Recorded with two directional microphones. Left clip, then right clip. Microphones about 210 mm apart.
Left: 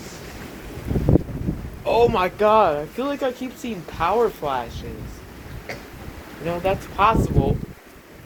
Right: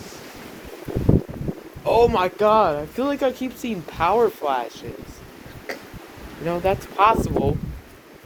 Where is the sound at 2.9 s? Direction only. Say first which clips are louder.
Right 2 dB; 40° right (ahead or behind).